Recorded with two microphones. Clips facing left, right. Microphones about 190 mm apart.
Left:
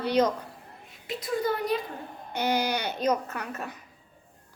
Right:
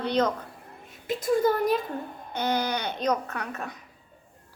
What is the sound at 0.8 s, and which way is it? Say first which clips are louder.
Speech: right 6 dB; 45° right (ahead or behind).